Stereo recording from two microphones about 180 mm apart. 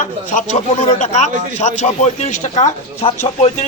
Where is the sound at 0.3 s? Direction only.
40° left (ahead or behind).